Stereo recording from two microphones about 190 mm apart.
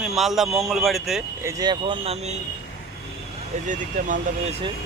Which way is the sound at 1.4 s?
15° right (ahead or behind).